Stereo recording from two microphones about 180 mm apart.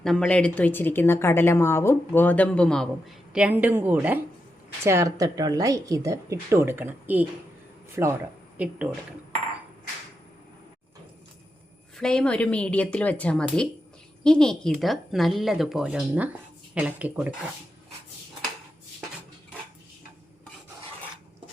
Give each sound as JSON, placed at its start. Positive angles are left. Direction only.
{"t": 0.0, "sound": "speech", "side_deg": 0}
{"t": 3.3, "sound": "speech", "side_deg": -5}
{"t": 11.9, "sound": "speech", "side_deg": 5}